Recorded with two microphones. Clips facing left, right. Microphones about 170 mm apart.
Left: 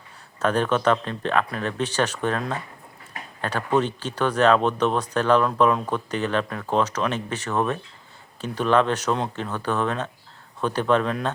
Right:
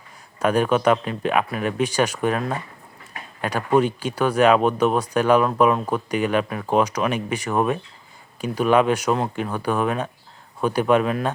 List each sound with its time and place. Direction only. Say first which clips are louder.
0.3 s speech: right 3 dB; 10° right (ahead or behind)